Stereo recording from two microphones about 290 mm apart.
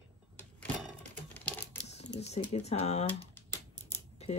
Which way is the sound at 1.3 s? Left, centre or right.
Centre.